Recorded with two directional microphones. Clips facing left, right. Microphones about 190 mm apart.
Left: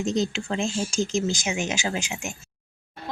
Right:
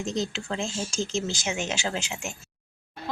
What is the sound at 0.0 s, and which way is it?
Speech, 20° left (ahead or behind).